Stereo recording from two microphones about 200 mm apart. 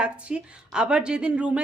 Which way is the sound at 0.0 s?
5° right (ahead or behind).